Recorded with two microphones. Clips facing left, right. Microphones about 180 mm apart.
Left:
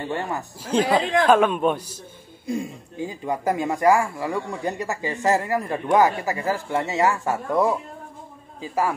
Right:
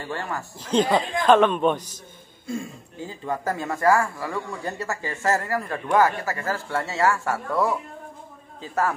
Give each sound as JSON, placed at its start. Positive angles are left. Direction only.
{"t": 0.0, "sound": "speech", "side_deg": 20}